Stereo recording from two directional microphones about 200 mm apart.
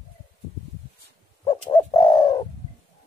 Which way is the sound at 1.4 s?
20° left (ahead or behind).